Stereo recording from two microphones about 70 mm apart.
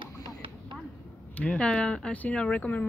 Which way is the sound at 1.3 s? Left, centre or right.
Centre.